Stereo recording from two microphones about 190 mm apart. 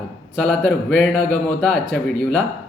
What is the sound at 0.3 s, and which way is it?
A man's voice, 5° left (ahead or behind).